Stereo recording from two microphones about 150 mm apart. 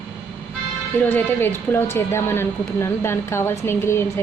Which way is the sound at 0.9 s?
15° left (ahead or behind).